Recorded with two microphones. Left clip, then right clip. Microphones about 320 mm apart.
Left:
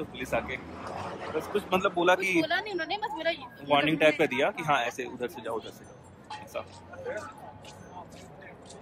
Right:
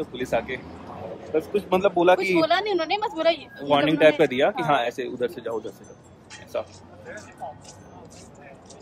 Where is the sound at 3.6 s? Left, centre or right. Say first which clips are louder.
Right 5 dB; centre.